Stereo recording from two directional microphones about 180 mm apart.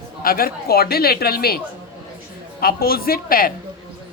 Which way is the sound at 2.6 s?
55° left (ahead or behind).